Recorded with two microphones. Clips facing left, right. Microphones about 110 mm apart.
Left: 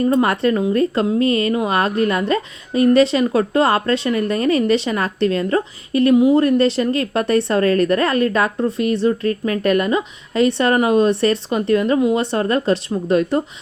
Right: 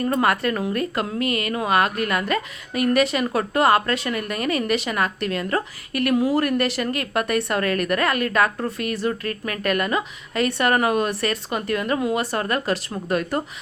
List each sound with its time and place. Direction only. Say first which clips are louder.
0.1 s speech: left 5 dB; 25° left (ahead or behind)